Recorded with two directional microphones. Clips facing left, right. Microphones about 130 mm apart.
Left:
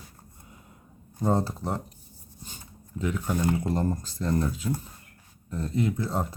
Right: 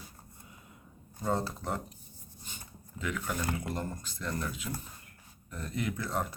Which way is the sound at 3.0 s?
30° left (ahead or behind).